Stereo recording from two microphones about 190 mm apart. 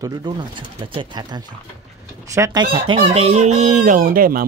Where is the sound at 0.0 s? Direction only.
20° right (ahead or behind).